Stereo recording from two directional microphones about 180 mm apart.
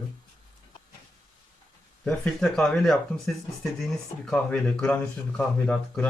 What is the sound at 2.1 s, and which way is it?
Speech, 5° left (ahead or behind).